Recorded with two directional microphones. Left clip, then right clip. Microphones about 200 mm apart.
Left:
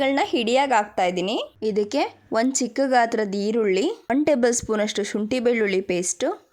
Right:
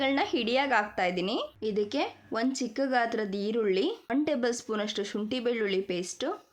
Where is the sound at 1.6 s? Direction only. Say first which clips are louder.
Left 8 dB; 40° left (ahead or behind).